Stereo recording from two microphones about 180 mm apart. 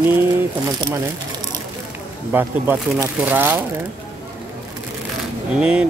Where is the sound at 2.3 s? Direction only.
10° right (ahead or behind).